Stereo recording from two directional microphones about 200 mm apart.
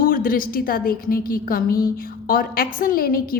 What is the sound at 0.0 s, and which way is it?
A woman's voice, 45° left (ahead or behind).